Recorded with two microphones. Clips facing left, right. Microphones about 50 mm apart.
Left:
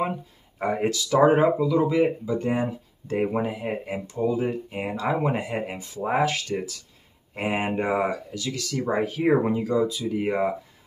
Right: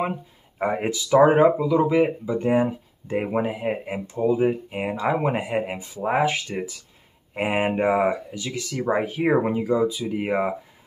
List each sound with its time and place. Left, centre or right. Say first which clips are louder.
0.0 s speech: right 1 dB; centre